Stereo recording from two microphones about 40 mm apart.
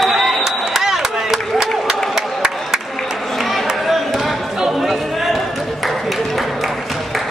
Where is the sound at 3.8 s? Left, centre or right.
Centre.